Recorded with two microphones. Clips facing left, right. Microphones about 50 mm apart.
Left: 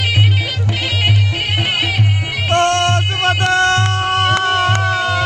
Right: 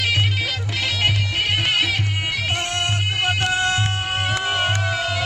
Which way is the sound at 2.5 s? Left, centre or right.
Left.